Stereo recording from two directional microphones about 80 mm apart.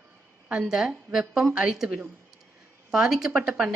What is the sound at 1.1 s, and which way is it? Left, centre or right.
A woman's voice, centre.